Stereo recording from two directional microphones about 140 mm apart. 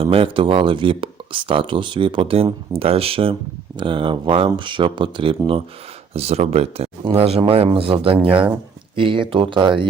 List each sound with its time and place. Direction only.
0.0 s speech: 40° right (ahead or behind)
6.1 s speech: 50° right (ahead or behind)